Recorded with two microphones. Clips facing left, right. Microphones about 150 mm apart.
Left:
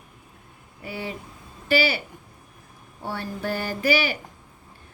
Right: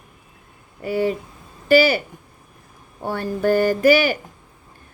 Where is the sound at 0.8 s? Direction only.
45° right (ahead or behind).